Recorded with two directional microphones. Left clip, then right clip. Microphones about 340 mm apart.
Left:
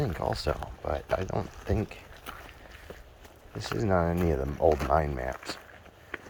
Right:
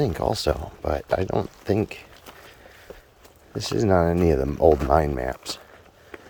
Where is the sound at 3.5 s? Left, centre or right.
Right.